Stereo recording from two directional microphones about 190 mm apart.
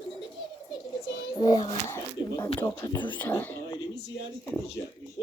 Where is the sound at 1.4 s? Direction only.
25° left (ahead or behind).